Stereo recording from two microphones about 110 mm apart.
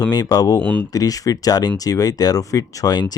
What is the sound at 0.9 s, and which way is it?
Speech, 35° left (ahead or behind).